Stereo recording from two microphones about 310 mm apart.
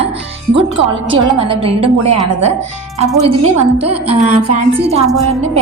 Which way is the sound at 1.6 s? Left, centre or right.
Right.